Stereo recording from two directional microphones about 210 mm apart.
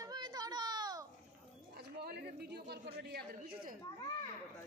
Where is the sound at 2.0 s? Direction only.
50° right (ahead or behind).